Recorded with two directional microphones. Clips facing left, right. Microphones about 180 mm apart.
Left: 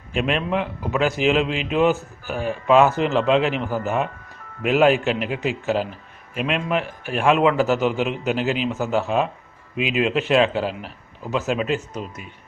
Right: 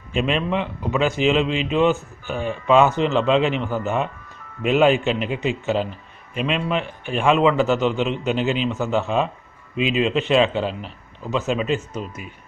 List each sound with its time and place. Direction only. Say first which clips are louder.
0.1 s a man's voice: right 1 dB; 5° left (ahead or behind)